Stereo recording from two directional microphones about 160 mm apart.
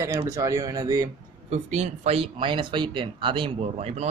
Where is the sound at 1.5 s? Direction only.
45° right (ahead or behind).